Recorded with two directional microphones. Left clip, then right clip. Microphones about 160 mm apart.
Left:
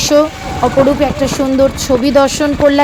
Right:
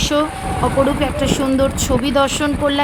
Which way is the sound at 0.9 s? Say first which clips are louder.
Left 5 dB; 20° left (ahead or behind).